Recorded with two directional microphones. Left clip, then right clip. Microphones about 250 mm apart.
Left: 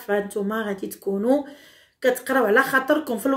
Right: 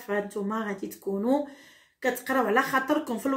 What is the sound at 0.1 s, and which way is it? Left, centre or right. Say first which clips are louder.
Speech: left 6 dB; centre.